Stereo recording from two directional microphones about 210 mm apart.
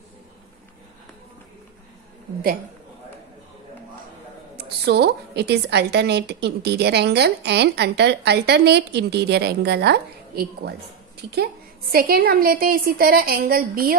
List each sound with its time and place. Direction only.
4.6 s a woman's voice: 50° right (ahead or behind)